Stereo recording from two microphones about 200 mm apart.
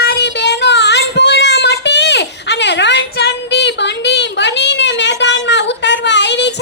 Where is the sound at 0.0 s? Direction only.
55° left (ahead or behind).